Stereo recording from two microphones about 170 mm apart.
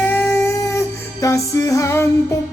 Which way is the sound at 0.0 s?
10° left (ahead or behind).